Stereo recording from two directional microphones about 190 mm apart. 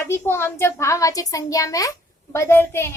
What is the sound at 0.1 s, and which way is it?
Child singing, 15° left (ahead or behind).